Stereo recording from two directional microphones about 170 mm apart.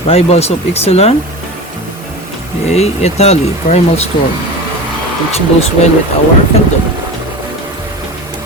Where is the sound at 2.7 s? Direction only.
40° left (ahead or behind).